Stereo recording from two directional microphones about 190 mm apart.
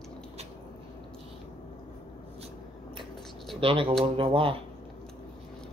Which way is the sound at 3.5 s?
30° right (ahead or behind).